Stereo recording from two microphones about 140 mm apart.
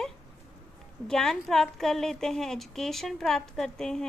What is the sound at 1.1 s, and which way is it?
A woman's voice, 5° left (ahead or behind).